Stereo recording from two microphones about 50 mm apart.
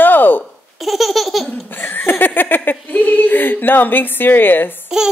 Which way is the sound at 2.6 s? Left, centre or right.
Left.